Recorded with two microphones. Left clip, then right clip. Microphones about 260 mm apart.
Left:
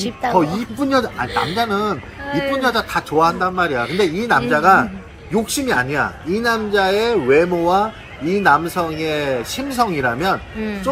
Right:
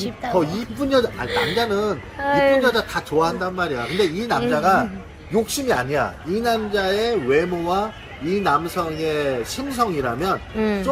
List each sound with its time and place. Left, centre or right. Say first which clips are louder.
0.0 s speech: left 4 dB; centre
1.3 s speech: left 1 dB; centre
1.5 s speech: left 2 dB; centre
2.2 s speech: right 5 dB; centre
2.6 s speech: left 2 dB; centre
10.6 s speech: right 4 dB; centre